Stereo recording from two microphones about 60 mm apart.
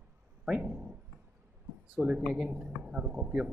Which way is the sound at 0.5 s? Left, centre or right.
Centre.